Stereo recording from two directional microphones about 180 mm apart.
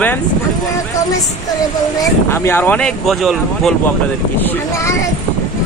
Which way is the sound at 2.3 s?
15° left (ahead or behind).